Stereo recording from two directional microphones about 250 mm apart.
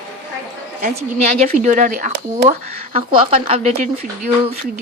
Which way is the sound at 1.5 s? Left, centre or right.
Right.